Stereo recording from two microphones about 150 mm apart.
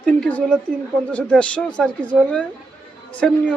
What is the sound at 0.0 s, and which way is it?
A woman's voice, 10° left (ahead or behind).